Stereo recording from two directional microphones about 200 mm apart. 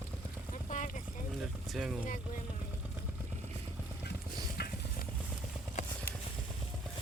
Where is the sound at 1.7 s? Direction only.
Centre (ahead or behind).